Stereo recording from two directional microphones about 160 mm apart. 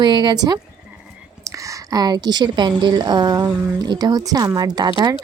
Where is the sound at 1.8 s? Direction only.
25° right (ahead or behind).